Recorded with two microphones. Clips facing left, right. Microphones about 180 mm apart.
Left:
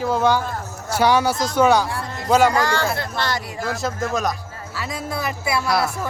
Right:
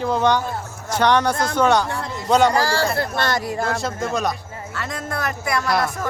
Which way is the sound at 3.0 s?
50° right (ahead or behind).